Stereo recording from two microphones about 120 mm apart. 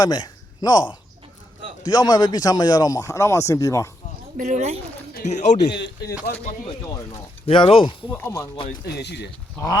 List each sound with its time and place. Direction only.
0.0 s speech: 35° left (ahead or behind)
4.4 s speech: 85° right
5.2 s speech: 80° left
7.4 s speech: 50° left (ahead or behind)
8.1 s speech: 25° left (ahead or behind)